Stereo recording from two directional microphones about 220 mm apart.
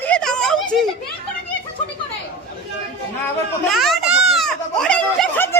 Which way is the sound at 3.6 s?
Centre (ahead or behind).